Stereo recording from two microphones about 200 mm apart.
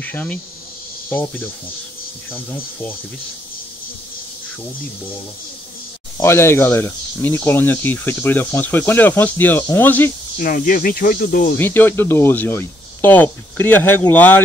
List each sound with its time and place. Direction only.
0.0 s speech: 10° left (ahead or behind)
6.1 s speech: 15° left (ahead or behind)
10.3 s speech: 45° left (ahead or behind)
11.5 s speech: 10° left (ahead or behind)